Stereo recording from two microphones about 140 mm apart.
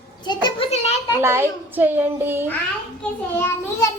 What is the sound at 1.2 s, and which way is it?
A child's voice, 20° right (ahead or behind).